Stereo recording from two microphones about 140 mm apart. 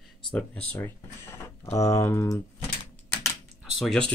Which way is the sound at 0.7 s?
20° left (ahead or behind).